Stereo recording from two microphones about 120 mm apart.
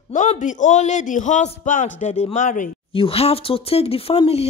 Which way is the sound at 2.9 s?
50° left (ahead or behind).